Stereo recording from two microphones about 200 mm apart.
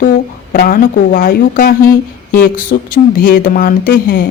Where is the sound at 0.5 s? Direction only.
45° left (ahead or behind).